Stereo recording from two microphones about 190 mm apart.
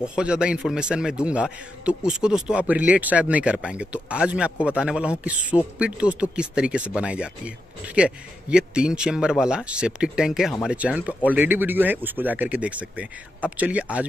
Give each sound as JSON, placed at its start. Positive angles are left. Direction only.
{"t": 0.0, "sound": "a man's voice", "side_deg": -5}